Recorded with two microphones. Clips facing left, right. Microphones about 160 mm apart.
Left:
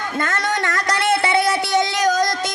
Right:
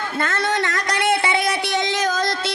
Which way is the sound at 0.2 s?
50° left (ahead or behind).